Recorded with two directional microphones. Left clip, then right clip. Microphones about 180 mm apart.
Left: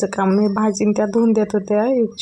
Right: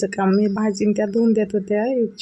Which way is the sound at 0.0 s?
15° left (ahead or behind).